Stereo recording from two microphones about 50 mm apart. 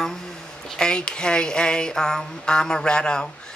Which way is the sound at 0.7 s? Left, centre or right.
Centre.